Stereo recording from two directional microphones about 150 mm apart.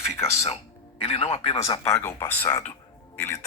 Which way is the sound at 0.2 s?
20° left (ahead or behind).